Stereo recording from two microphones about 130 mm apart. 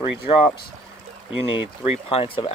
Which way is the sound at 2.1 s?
50° left (ahead or behind).